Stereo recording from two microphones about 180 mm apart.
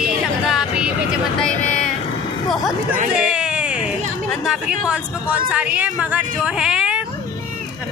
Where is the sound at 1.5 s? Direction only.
45° left (ahead or behind).